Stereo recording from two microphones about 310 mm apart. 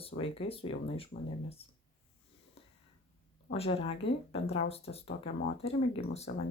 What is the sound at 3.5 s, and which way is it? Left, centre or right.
Speech, centre.